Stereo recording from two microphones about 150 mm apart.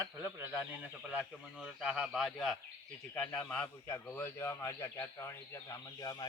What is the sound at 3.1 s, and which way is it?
A man's voice, 10° left (ahead or behind).